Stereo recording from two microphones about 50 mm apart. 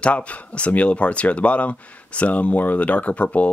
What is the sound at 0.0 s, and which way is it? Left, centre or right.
Speech, left.